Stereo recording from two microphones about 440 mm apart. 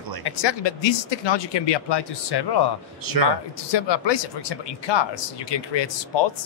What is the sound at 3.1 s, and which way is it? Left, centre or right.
Speech, right.